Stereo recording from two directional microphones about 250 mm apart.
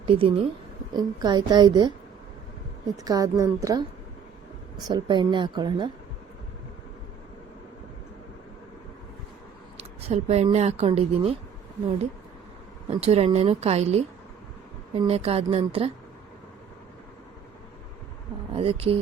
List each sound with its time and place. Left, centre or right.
0.1 s a woman's voice: right
3.0 s speech: centre
4.9 s speech: centre
9.7 s speech: right
12.9 s a woman's voice: right
18.5 s a woman's voice: right